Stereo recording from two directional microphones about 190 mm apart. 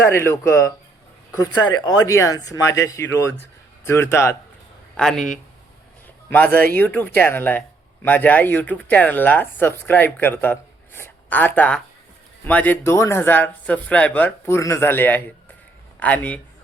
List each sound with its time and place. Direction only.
0.0 s speech: 15° left (ahead or behind)
4.9 s a man's voice: centre (ahead or behind)